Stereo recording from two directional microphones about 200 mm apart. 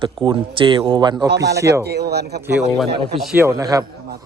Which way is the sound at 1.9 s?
55° right (ahead or behind).